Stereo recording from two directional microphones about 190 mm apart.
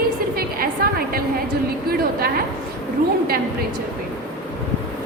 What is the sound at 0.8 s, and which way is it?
A woman's voice, 50° right (ahead or behind).